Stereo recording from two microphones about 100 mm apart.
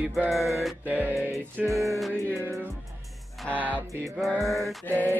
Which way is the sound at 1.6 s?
10° right (ahead or behind).